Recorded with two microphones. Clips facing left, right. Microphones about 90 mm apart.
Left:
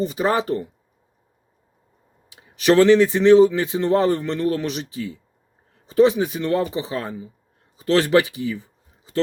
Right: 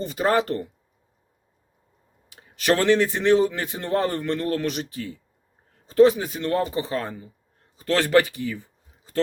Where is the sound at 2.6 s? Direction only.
20° left (ahead or behind).